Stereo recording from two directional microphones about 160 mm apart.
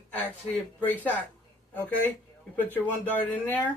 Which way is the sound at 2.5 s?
10° left (ahead or behind).